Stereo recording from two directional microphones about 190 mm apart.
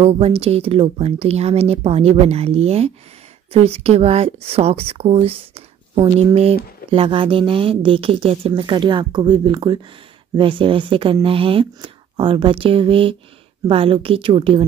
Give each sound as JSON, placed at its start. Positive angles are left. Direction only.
{"t": 0.0, "sound": "speech", "side_deg": -30}